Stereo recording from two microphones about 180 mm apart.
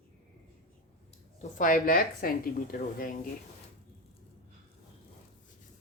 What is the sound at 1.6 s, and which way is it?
Speech, 50° left (ahead or behind).